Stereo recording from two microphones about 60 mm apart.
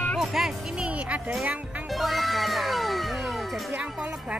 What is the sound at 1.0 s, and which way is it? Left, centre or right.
Speech, right.